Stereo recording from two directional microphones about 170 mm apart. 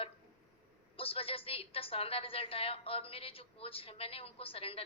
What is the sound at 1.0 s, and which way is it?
A woman's voice, 35° left (ahead or behind).